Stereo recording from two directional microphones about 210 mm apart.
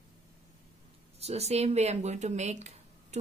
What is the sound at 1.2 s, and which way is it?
Speech, 30° right (ahead or behind).